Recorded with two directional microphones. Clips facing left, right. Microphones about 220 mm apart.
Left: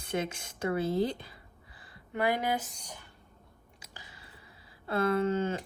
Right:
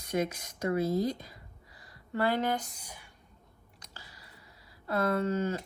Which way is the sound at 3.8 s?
15° left (ahead or behind).